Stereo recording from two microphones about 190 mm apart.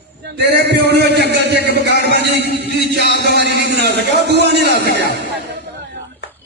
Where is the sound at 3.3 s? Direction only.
60° right (ahead or behind).